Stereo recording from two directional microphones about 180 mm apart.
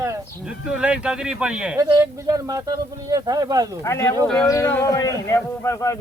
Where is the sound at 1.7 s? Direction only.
20° right (ahead or behind).